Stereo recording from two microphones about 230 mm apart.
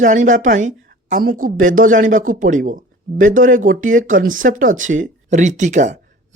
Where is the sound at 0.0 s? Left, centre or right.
Right.